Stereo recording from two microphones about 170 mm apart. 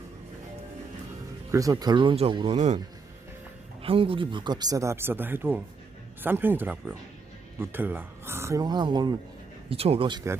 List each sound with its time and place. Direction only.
1.5 s speech: 20° right (ahead or behind)
3.8 s speech: 35° right (ahead or behind)
9.6 s speech: 35° right (ahead or behind)